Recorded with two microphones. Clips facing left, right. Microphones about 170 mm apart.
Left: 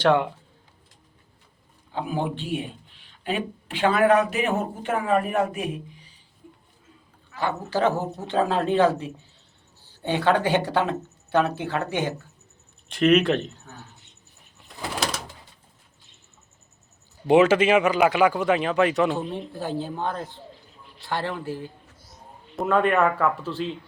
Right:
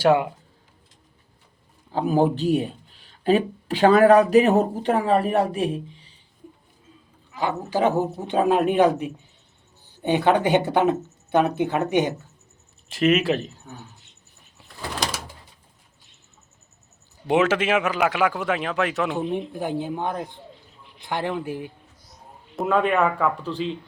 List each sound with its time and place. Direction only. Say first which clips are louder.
0.0 s a woman's voice: right 2 dB; 10° right (ahead or behind)
1.9 s speech: right 7 dB; 40° right (ahead or behind)
7.3 s a woman's voice: right 2 dB; 15° right (ahead or behind)
12.9 s speech: left 1 dB; 5° right (ahead or behind)
15.0 s bird: even; 5° left (ahead or behind)
17.2 s speech: left 3 dB; centre (ahead or behind)
19.5 s a woman's voice: right 2 dB; 15° right (ahead or behind)
22.5 s speech: even; centre (ahead or behind)